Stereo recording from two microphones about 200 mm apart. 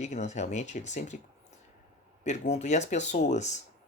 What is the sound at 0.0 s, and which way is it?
Speech, 35° left (ahead or behind).